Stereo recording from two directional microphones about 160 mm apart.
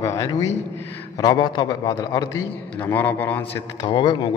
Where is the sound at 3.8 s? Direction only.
25° left (ahead or behind).